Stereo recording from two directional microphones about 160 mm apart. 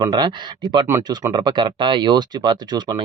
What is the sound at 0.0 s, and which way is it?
Speech, 25° right (ahead or behind).